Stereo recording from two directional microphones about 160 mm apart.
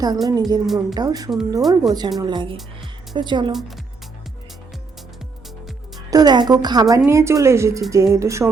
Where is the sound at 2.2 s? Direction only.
30° right (ahead or behind).